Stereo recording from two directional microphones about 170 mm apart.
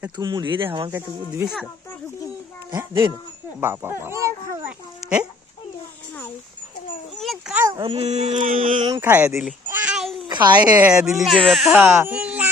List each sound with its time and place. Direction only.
0.2 s speech: 25° right (ahead or behind)
0.9 s speech: 15° right (ahead or behind)
3.6 s speech: 15° right (ahead or behind)
7.2 s dog: centre (ahead or behind)
7.7 s speech: 30° right (ahead or behind); by 8.8 s 50° right (ahead or behind)
8.8 s speech: 15° right (ahead or behind)
9.6 s a sound: 10° right (ahead or behind)
10.2 s a sound: 25° right (ahead or behind)
10.8 s speech: 5° right (ahead or behind)
11.8 s baby cry: 10° right (ahead or behind)